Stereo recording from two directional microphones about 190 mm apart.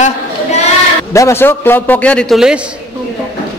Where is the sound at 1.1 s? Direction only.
15° left (ahead or behind); by 2.6 s 5° right (ahead or behind).